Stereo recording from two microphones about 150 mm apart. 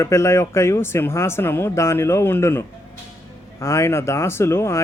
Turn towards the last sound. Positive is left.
turn(degrees=15)  # may be behind; listen again after turning